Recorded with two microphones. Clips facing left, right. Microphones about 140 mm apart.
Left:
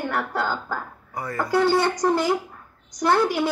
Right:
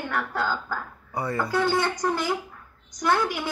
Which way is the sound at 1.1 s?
25° right (ahead or behind).